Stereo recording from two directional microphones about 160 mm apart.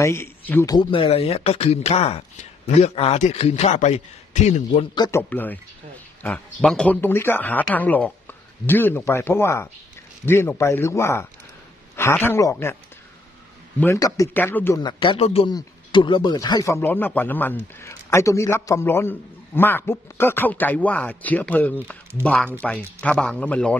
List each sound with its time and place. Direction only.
0.0 s a man's voice: 15° left (ahead or behind)
0.7 s a man's voice: 35° left (ahead or behind)
4.9 s speech: 25° left (ahead or behind)
5.3 s speech: 10° left (ahead or behind)
13.7 s speech: 20° left (ahead or behind)
14.8 s speech: 30° left (ahead or behind); by 23.8 s 10° left (ahead or behind)